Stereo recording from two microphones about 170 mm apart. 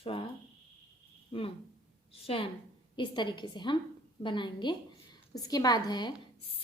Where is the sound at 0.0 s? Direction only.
30° left (ahead or behind).